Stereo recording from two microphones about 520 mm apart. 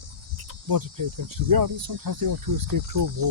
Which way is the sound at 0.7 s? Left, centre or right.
Right.